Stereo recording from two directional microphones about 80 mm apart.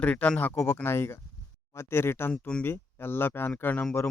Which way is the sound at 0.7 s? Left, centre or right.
Left.